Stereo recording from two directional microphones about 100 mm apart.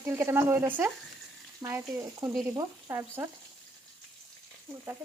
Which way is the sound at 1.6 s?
30° right (ahead or behind).